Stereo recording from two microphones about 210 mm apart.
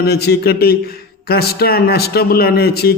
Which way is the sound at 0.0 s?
50° left (ahead or behind).